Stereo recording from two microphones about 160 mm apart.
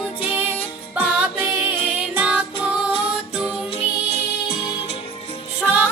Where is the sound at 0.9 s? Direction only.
10° right (ahead or behind).